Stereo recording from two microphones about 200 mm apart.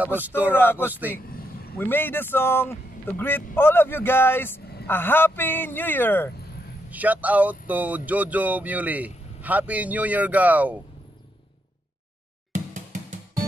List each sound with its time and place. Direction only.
0.0 s speech: 10° right (ahead or behind)
0.5 s a man's voice: 10° left (ahead or behind)
6.9 s speech: 10° right (ahead or behind)
12.5 s drum: 40° right (ahead or behind)